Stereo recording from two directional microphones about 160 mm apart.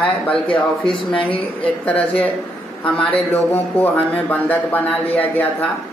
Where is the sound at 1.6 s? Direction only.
10° left (ahead or behind).